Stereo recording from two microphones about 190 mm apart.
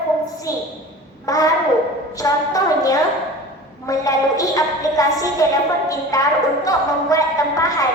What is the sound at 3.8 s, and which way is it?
A woman's voice, 20° left (ahead or behind).